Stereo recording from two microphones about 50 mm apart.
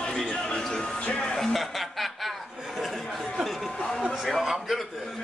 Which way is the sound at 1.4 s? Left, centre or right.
Centre.